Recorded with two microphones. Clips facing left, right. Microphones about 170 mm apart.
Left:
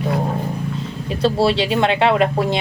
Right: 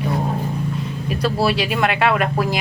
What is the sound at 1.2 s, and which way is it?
Speech, 25° left (ahead or behind).